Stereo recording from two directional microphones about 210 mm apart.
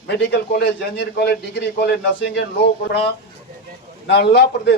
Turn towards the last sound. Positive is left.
turn(degrees=55)  # may be behind; listen again after turning